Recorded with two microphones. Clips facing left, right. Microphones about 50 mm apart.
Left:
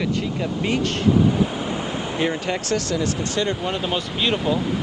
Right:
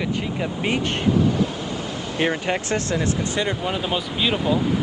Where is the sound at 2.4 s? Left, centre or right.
Right.